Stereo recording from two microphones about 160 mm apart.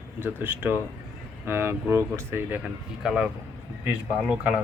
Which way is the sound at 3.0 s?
5° right (ahead or behind).